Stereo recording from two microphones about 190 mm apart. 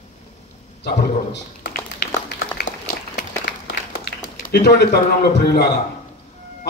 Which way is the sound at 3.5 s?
60° left (ahead or behind).